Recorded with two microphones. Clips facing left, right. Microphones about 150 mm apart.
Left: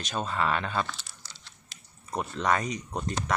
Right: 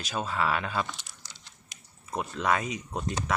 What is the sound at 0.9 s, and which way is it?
Typing, 20° right (ahead or behind).